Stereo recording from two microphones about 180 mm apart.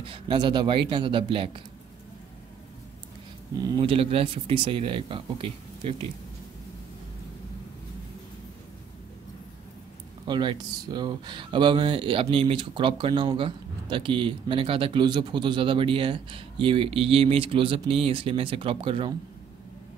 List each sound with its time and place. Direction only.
0.0 s speech: 30° right (ahead or behind)
3.6 s speech: 25° right (ahead or behind)
10.2 s speech: 25° right (ahead or behind)